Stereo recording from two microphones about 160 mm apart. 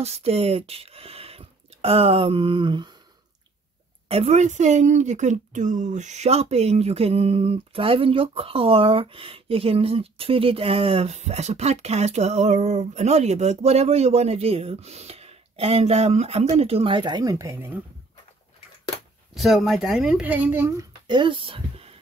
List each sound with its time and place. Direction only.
0.0 s speech: 40° right (ahead or behind)
4.1 s a woman's voice: 40° right (ahead or behind); by 17.7 s 15° right (ahead or behind)
19.3 s speech: centre (ahead or behind)
21.1 s speech: 30° right (ahead or behind)